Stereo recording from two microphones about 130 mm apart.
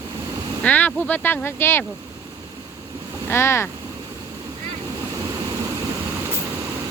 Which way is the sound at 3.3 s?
20° left (ahead or behind).